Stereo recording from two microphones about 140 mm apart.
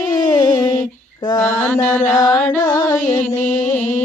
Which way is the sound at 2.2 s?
15° left (ahead or behind).